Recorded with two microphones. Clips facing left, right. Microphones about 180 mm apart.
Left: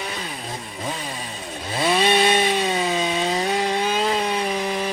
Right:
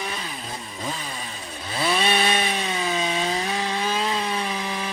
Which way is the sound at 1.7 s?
25° left (ahead or behind).